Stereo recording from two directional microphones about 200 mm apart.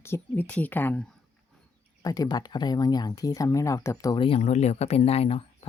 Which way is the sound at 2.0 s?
20° left (ahead or behind).